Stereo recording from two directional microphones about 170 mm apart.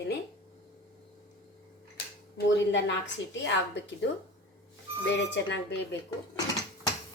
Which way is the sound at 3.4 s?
90° left.